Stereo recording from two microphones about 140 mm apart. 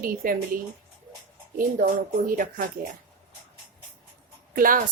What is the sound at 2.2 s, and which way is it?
Speech, 80° right.